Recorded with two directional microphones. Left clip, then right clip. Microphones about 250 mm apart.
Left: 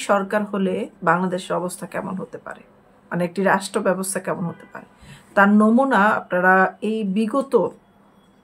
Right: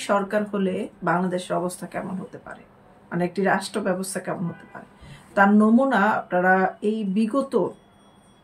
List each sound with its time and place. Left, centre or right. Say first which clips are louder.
0.0 s speech: left 3 dB; centre